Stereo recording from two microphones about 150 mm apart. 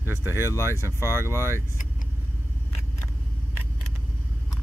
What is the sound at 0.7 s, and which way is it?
Speech, 15° right (ahead or behind).